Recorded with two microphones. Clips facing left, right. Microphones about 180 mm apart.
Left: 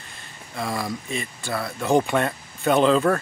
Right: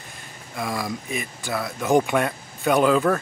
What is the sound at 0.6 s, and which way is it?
Speech, 10° right (ahead or behind).